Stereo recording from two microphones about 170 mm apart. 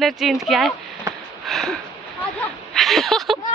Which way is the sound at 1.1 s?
15° right (ahead or behind).